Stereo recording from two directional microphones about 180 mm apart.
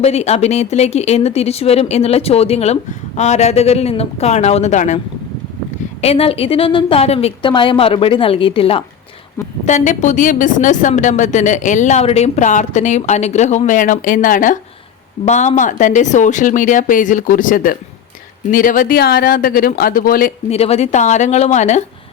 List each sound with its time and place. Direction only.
0.0 s a woman's voice: 35° left (ahead or behind)
6.0 s a woman's voice: 35° left (ahead or behind)
9.6 s a woman's voice: 40° left (ahead or behind)
20.5 s a woman's voice: 35° left (ahead or behind)